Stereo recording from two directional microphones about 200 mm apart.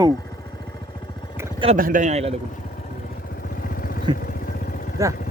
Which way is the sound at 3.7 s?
45° left (ahead or behind).